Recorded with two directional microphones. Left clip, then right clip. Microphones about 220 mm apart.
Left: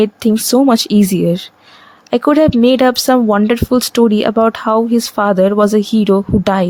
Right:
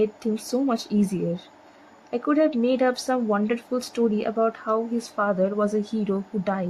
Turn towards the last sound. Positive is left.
turn(degrees=40)  # may be behind; listen again after turning